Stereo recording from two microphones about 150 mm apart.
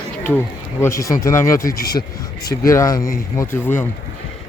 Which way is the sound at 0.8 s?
20° left (ahead or behind).